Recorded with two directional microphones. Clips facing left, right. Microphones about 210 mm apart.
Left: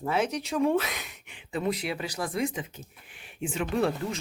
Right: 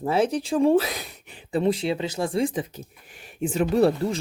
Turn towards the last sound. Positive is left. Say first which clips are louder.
# right 7 dB
turn(degrees=-35)  # may be behind; listen again after turning